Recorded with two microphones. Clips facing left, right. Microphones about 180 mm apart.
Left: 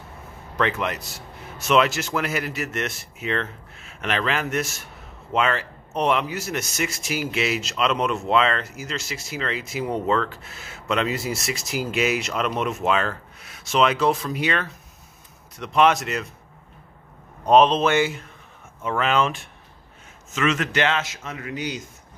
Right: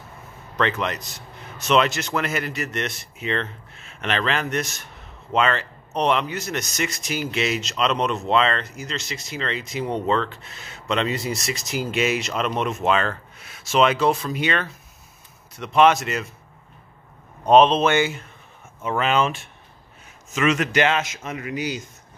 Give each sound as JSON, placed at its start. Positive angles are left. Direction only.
{"t": 0.6, "sound": "speech", "side_deg": 10}
{"t": 17.5, "sound": "speech", "side_deg": 0}
{"t": 20.3, "sound": "a man's voice", "side_deg": -15}
{"t": 21.5, "sound": "speech", "side_deg": -5}